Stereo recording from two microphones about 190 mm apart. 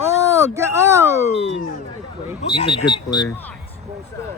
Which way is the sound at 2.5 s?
30° left (ahead or behind).